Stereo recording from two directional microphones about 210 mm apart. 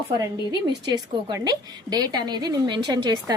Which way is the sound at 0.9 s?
20° right (ahead or behind).